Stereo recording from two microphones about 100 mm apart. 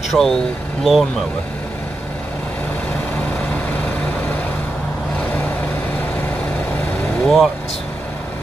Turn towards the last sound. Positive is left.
turn(degrees=10)  # may be behind; listen again after turning